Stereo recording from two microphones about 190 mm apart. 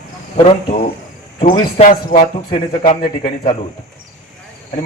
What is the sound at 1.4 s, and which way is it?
A man's voice, 40° left (ahead or behind).